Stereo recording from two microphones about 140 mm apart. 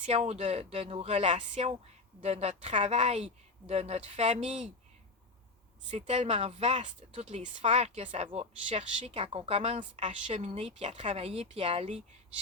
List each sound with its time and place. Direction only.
0.0 s a woman's voice: 50° right (ahead or behind)
5.9 s a woman's voice: 50° right (ahead or behind)